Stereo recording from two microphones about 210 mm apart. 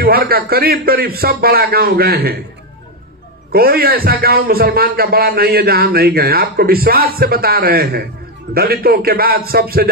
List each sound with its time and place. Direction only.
0.0 s a man's voice: 45° right (ahead or behind)
3.5 s a man's voice: 45° right (ahead or behind)